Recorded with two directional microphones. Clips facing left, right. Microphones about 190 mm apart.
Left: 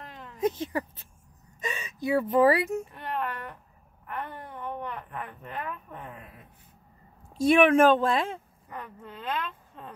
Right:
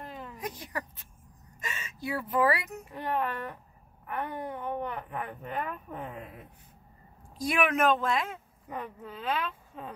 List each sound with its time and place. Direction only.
0.0 s a sound: 5° right (ahead or behind)
0.4 s speech: 25° left (ahead or behind)
4.2 s speech: 10° right (ahead or behind)
7.3 s speech: 25° left (ahead or behind)
8.6 s speech: 15° right (ahead or behind)
9.0 s speech: 5° right (ahead or behind)